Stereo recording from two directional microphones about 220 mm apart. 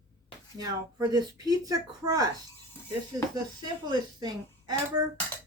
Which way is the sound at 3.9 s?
20° right (ahead or behind).